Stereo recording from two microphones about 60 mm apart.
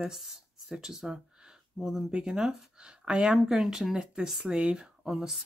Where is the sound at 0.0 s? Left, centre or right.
Centre.